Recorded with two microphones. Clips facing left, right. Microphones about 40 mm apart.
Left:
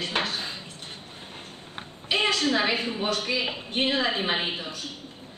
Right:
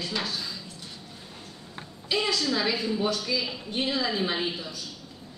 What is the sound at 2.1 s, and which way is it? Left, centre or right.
A woman's voice, left.